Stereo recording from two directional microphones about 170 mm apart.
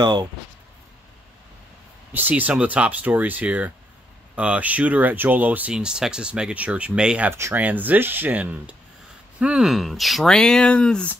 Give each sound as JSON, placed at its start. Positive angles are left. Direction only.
{"t": 0.0, "sound": "speech", "side_deg": -25}
{"t": 2.1, "sound": "speech", "side_deg": -10}